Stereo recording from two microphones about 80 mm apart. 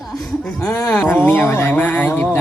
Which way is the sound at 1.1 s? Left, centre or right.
Left.